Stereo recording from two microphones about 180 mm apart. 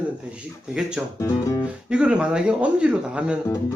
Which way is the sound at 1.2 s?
20° left (ahead or behind).